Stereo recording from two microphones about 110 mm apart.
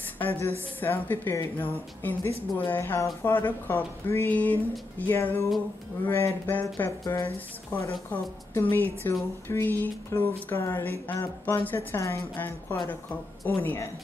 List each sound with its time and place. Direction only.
0.2 s speech: 15° left (ahead or behind)